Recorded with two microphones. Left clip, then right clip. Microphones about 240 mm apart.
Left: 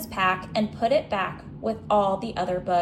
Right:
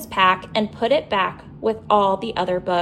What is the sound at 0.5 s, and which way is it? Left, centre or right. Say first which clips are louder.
A woman's voice: right 4 dB; right.